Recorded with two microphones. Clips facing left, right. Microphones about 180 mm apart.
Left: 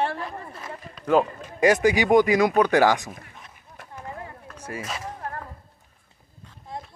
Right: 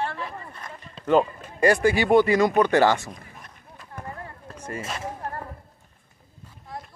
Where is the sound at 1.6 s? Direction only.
15° left (ahead or behind).